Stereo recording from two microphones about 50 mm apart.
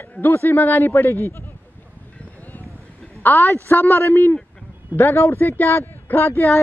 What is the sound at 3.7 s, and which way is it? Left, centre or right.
A woman's voice, left.